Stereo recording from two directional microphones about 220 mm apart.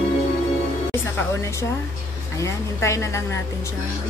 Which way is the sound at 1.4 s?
15° left (ahead or behind).